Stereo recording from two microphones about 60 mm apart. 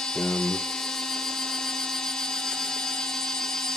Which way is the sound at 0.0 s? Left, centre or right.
Centre.